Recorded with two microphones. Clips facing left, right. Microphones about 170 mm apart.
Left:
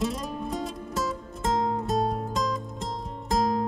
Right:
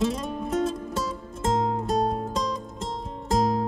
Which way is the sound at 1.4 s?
25° right (ahead or behind).